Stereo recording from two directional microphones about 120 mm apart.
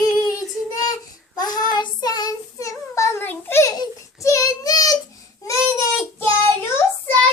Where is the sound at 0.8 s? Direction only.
35° left (ahead or behind).